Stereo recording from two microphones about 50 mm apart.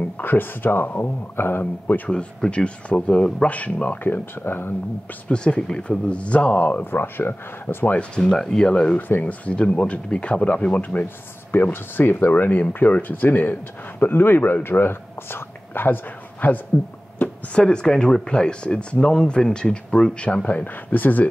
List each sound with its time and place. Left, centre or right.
0.2 s speech: left
2.0 s speech: centre
3.4 s speech: left
4.0 s speech: left
5.3 s speech: centre
6.8 s speech: left
8.2 s speech: centre
9.2 s speech: left
11.7 s speech: left
12.3 s speech: left
17.6 s speech: centre; by 21.3 s left